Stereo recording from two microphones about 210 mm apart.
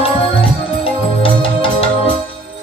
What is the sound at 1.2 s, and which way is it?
Music, 25° left (ahead or behind).